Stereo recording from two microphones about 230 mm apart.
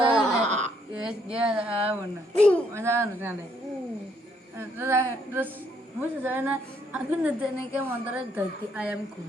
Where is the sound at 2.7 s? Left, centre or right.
Centre.